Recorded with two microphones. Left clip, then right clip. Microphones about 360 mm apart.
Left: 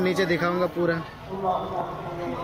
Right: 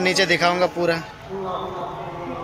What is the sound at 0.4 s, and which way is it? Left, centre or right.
Speech, centre.